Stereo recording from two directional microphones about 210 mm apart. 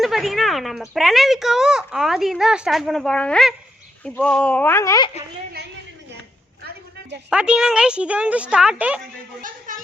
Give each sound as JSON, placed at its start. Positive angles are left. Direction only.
{"t": 0.0, "sound": "a woman's voice", "side_deg": 0}
{"t": 7.3, "sound": "a woman's voice", "side_deg": -5}
{"t": 9.4, "sound": "a sound", "side_deg": -40}